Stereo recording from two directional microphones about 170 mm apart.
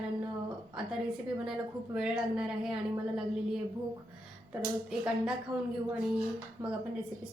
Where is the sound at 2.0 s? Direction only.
5° right (ahead or behind).